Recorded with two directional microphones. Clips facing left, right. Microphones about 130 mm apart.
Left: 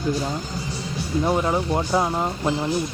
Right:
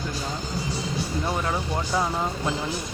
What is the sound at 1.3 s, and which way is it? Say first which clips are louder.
Speech: left 8 dB; 20° left (ahead or behind).